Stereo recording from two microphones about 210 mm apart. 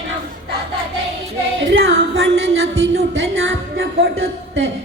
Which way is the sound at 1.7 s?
60° right (ahead or behind).